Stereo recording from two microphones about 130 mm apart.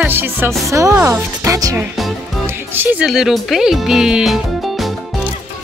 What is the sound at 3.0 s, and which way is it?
Speech, centre (ahead or behind).